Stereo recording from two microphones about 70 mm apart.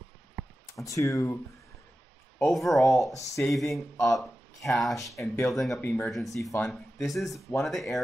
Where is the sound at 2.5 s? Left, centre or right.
Centre.